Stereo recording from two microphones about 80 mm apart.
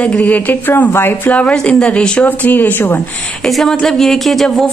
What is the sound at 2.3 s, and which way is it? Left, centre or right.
Speech, left.